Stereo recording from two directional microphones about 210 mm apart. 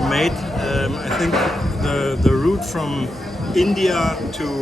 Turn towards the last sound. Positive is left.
turn(degrees=0)  # may be behind; listen again after turning